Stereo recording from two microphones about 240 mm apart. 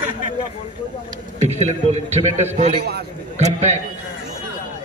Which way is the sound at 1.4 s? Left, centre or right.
Right.